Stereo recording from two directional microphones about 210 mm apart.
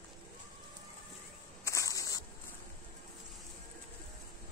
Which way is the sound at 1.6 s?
15° left (ahead or behind).